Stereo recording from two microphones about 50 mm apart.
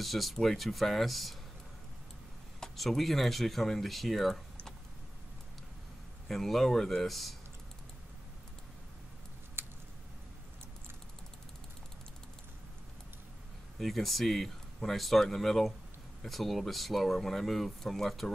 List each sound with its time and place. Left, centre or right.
0.0 s speech: centre
2.6 s speech: centre
6.2 s speech: centre
9.6 s a sound: right
13.7 s speech: centre